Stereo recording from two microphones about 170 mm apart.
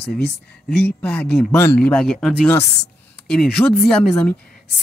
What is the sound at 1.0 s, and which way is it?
Speech, 10° left (ahead or behind).